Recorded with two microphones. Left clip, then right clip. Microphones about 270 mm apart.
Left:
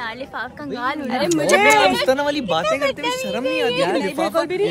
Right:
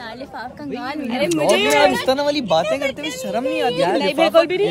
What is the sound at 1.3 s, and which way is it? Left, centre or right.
Speech, centre.